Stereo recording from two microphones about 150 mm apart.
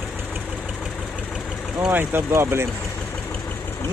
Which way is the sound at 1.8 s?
15° right (ahead or behind).